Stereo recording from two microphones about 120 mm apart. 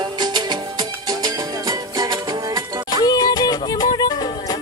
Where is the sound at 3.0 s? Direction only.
30° left (ahead or behind).